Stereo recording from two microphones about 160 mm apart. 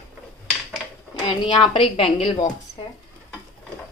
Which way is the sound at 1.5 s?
35° left (ahead or behind).